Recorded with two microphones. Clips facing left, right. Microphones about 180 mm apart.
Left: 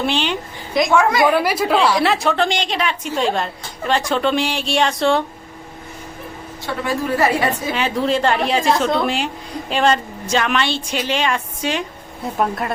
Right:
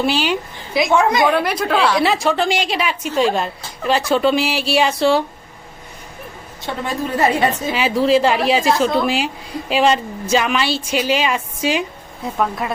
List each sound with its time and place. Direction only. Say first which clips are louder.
0.0 s a woman's voice: right 2 dB; 5° right (ahead or behind)
0.9 s a woman's voice: even; 20° right (ahead or behind)
1.3 s a woman's voice: left 1 dB; 5° left (ahead or behind)
6.8 s a woman's voice: even; 20° right (ahead or behind)
7.7 s a woman's voice: right 6 dB; 5° right (ahead or behind)